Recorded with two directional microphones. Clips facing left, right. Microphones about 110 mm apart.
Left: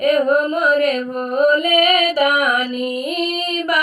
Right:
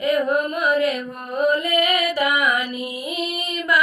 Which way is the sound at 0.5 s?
55° left (ahead or behind).